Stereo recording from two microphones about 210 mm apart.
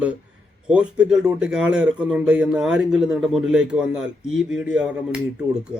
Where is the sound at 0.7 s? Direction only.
5° right (ahead or behind).